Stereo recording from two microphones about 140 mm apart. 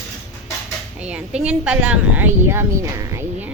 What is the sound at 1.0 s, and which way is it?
A woman's voice, 5° right (ahead or behind).